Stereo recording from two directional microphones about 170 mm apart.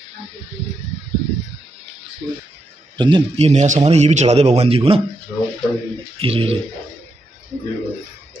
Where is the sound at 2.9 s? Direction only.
30° right (ahead or behind).